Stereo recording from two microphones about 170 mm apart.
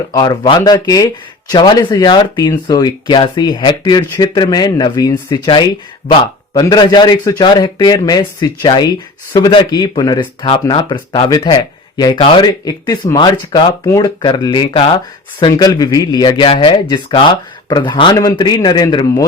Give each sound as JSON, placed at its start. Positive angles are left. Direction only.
{"t": 0.1, "sound": "speech", "side_deg": 25}